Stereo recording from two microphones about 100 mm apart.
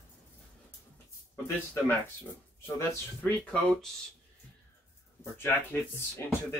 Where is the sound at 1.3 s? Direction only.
20° left (ahead or behind).